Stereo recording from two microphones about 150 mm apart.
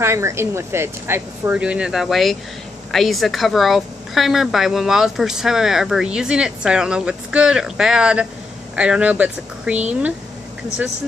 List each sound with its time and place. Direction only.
0.0 s a woman's voice: 20° right (ahead or behind)